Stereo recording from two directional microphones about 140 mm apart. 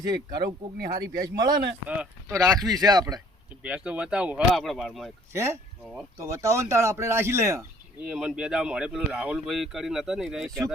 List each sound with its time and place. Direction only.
0.0 s speech: 30° right (ahead or behind)
0.4 s speech: 90° right
1.4 s speech: 30° right (ahead or behind)
3.6 s speech: 10° right (ahead or behind)
5.3 s speech: 20° right (ahead or behind)
8.0 s speech: 5° right (ahead or behind)